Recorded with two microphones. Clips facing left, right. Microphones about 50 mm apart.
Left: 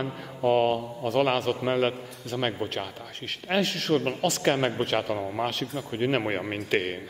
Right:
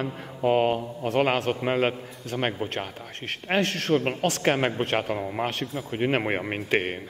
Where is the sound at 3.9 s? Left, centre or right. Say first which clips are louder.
Right 1 dB; centre.